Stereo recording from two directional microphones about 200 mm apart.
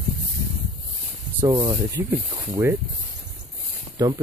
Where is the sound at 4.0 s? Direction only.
15° right (ahead or behind).